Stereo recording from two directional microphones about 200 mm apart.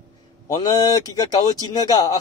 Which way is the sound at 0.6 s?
20° left (ahead or behind).